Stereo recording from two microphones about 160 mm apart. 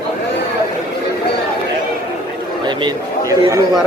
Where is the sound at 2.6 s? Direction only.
30° right (ahead or behind).